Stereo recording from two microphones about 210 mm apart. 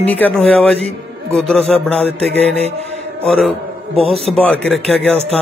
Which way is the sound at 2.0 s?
30° right (ahead or behind).